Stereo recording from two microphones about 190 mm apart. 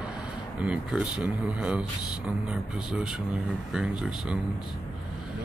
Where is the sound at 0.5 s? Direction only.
5° right (ahead or behind).